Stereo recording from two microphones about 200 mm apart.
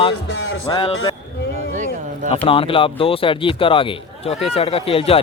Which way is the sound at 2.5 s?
25° left (ahead or behind).